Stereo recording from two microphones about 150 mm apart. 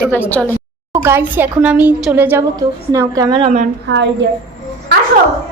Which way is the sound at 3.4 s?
50° right (ahead or behind).